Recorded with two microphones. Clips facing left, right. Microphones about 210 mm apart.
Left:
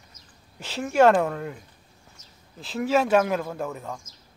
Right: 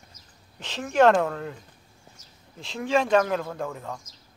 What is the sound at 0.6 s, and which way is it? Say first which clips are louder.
Speech: left 1 dB; 10° left (ahead or behind).